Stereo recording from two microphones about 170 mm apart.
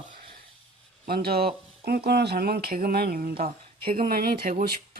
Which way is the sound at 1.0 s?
60° right (ahead or behind).